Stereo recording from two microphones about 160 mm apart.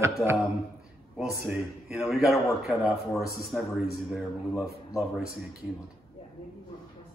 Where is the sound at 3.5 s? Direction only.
5° right (ahead or behind).